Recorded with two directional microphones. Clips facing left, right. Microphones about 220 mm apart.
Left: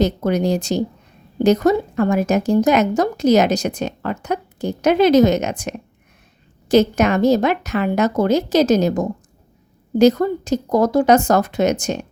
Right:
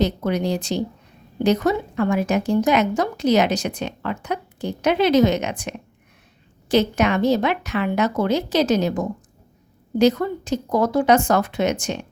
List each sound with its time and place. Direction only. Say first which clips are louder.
0.0 s a woman's voice: left 4 dB; 45° left (ahead or behind)